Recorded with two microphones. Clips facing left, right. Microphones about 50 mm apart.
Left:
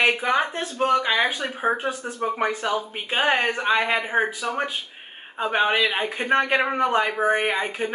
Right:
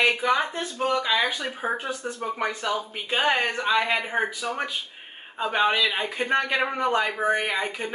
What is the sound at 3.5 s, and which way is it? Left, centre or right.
Speech, left.